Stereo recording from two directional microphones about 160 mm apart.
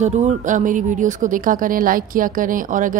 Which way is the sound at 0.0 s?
45° right (ahead or behind).